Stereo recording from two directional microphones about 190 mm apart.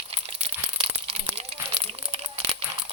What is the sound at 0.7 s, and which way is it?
Crumpling, 30° right (ahead or behind).